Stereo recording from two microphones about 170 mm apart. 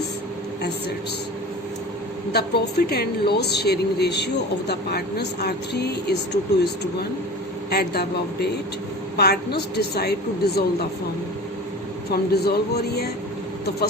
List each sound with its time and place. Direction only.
2.3 s a woman's voice: 70° left (ahead or behind)
7.7 s a woman's voice: 70° left (ahead or behind)
12.1 s a woman's voice: 70° left (ahead or behind)